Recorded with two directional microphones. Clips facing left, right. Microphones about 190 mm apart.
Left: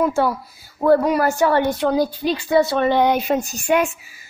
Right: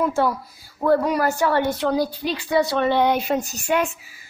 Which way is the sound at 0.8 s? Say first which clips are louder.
Left 3 dB; 15° left (ahead or behind).